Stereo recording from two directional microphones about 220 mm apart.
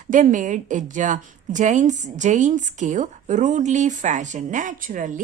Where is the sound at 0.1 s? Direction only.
35° right (ahead or behind).